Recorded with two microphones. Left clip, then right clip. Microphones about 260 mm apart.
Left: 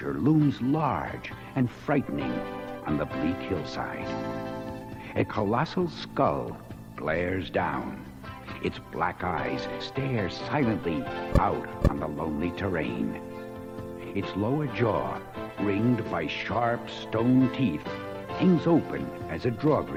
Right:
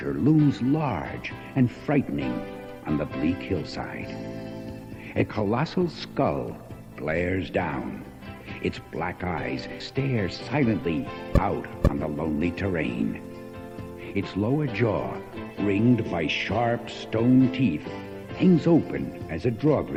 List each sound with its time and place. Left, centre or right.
0.0 s speech: left
5.1 s speech: left
14.1 s speech: left